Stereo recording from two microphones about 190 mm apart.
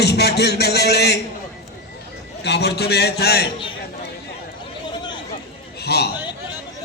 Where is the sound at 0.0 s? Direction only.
60° left (ahead or behind).